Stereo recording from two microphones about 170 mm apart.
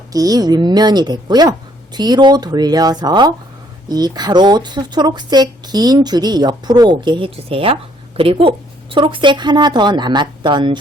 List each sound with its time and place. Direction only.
0.1 s speech: 20° right (ahead or behind)